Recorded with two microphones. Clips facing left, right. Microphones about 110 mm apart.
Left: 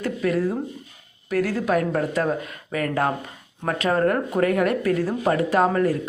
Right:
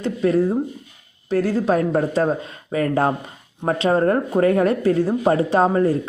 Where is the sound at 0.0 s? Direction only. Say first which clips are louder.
Right 4 dB; 30° right (ahead or behind).